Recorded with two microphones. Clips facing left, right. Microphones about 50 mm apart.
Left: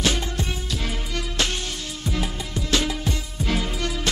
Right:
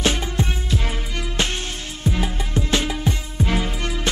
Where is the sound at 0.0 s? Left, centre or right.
Right.